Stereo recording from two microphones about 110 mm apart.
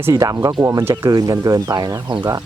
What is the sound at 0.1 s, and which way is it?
Speech, 35° right (ahead or behind).